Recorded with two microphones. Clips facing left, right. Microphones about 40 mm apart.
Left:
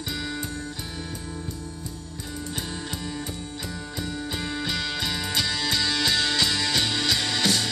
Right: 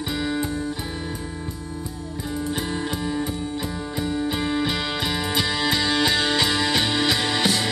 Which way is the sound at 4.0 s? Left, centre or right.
Centre.